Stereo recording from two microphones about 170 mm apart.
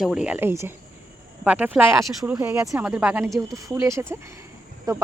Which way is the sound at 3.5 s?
20° right (ahead or behind).